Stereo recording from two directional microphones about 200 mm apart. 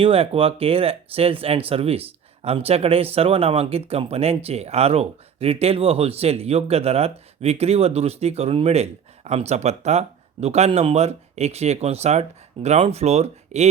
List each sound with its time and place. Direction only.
0.0 s speech: 30° right (ahead or behind)